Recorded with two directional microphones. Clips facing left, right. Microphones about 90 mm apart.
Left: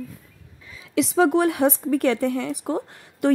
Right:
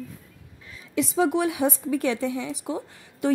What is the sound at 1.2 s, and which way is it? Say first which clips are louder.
A woman's voice: left 4 dB; 50° left (ahead or behind).